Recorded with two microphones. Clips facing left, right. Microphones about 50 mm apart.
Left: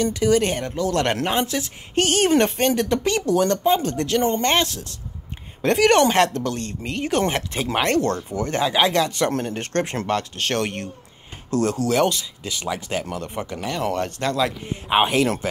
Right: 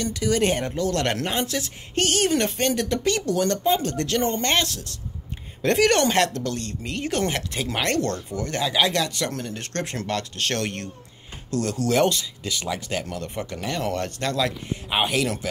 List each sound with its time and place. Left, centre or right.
0.0 s speech: left
0.4 s speech: centre
0.7 s speech: centre
9.3 s speech: left
11.9 s speech: centre; by 15.3 s left